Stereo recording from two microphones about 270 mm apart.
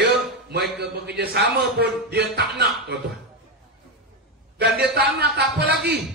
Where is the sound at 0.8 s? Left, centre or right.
Right.